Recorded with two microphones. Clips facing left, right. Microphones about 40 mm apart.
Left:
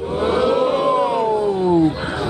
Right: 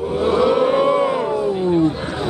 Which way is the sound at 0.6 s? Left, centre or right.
Centre.